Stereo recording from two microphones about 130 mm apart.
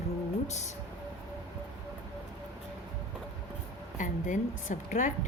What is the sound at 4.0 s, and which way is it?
Speech, 80° left.